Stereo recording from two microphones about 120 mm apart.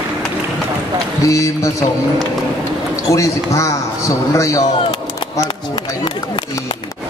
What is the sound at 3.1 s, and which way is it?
A man's voice, 25° left (ahead or behind).